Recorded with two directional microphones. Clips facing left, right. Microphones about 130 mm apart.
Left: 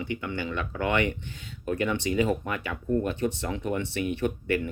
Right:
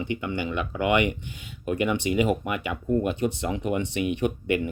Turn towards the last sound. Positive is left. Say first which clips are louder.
# right 2 dB
turn(degrees=-15)  # may be behind; listen again after turning